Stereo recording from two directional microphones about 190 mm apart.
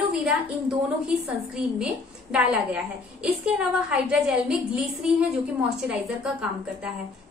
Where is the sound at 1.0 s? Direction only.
5° right (ahead or behind).